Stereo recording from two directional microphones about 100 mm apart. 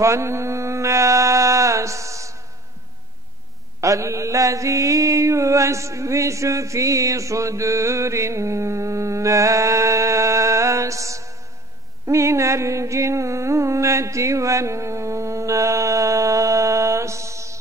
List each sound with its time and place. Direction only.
0.0 s mantra: 30° right (ahead or behind)
3.8 s mantra: 30° right (ahead or behind)
12.1 s music: 30° right (ahead or behind)